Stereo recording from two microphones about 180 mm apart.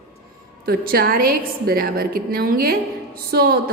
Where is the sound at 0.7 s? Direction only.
55° right (ahead or behind).